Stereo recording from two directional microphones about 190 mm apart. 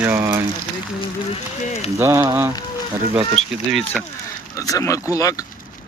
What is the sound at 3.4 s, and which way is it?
Speech, centre (ahead or behind).